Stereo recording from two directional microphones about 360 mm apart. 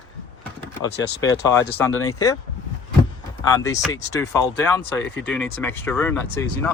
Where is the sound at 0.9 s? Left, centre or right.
Left.